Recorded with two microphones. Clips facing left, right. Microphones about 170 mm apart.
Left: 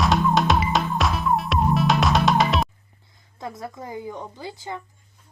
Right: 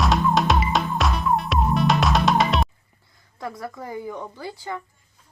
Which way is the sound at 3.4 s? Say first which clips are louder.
Right 1 dB; 20° left (ahead or behind).